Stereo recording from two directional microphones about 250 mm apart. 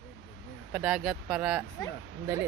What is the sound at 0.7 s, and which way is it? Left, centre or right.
Speech, centre.